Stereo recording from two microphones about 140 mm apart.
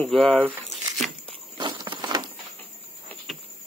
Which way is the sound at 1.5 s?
30° right (ahead or behind).